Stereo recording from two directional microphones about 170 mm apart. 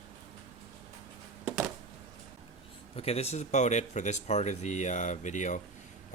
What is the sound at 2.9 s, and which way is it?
Speech, 35° left (ahead or behind).